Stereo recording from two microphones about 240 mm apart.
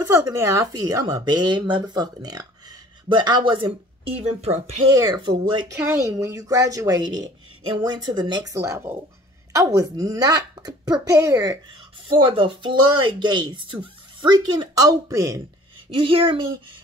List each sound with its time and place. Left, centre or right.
0.0 s speech: centre